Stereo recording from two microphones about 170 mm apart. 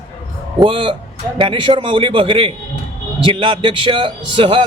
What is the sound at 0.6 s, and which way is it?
A man's voice, 30° right (ahead or behind).